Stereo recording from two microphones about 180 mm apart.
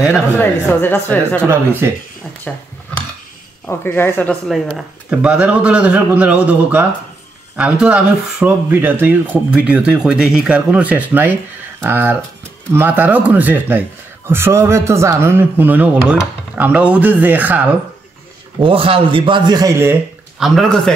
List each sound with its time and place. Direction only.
0.4 s speech: 10° left (ahead or behind)
1.8 s speech: 15° right (ahead or behind)
2.5 s speech: 5° left (ahead or behind)
3.6 s speech: 10° left (ahead or behind)
4.5 s speech: centre (ahead or behind)
18.6 s a man's voice: 30° right (ahead or behind)
20.3 s a man's voice: centre (ahead or behind)